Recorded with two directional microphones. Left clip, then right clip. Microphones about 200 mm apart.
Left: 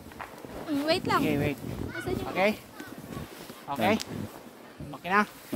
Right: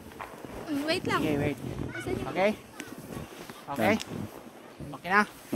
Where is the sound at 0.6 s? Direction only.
25° left (ahead or behind).